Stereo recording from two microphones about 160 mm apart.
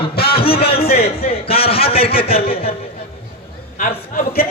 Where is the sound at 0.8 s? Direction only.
70° left (ahead or behind).